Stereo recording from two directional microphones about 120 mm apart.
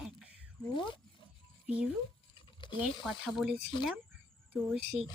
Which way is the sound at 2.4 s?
40° left (ahead or behind).